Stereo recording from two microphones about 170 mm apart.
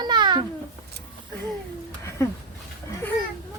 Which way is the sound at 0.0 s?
25° right (ahead or behind).